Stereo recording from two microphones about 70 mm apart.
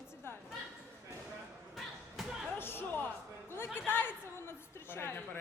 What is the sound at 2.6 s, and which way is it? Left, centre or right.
Music, left.